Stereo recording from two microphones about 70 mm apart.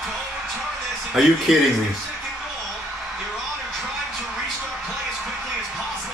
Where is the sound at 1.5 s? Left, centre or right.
Centre.